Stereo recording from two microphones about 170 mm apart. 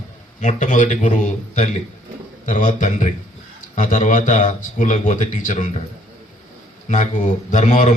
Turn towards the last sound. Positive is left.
turn(degrees=45)  # may be behind; listen again after turning